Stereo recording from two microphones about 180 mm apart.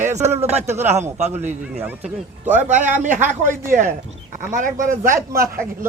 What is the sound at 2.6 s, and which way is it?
Speech, 45° right (ahead or behind).